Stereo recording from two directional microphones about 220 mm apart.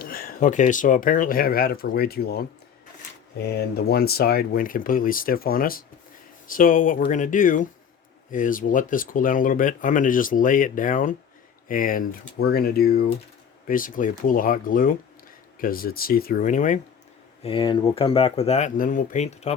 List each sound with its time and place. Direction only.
0.0 s speech: 40° left (ahead or behind)
17.4 s speech: 25° left (ahead or behind)